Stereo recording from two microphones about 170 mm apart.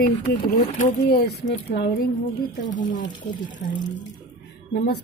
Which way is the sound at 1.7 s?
60° left (ahead or behind).